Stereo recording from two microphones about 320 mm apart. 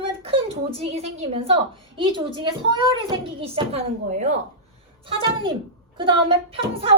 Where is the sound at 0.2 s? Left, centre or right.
Centre.